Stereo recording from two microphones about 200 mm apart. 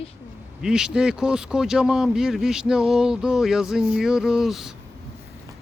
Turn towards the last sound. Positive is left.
turn(degrees=0)  # may be behind; listen again after turning